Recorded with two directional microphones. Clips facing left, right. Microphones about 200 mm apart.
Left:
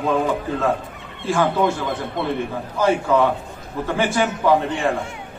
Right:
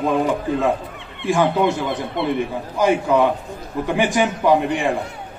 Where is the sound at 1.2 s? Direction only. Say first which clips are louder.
Right 2 dB; 15° right (ahead or behind).